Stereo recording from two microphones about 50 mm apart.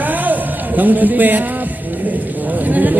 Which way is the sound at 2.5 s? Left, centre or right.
Right.